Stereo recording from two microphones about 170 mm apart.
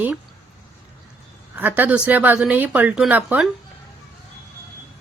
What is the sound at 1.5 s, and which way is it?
A woman's voice, 10° right (ahead or behind).